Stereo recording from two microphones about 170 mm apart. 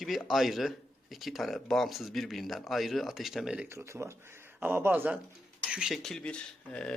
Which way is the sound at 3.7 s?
15° right (ahead or behind).